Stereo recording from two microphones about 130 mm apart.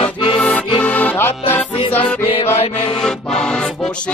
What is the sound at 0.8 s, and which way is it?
Music, 10° left (ahead or behind).